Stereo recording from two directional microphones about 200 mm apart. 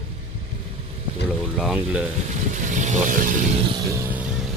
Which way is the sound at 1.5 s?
Centre (ahead or behind).